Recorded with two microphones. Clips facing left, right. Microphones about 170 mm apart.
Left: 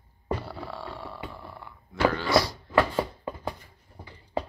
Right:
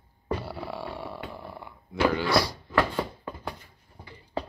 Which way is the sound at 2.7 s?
10° left (ahead or behind).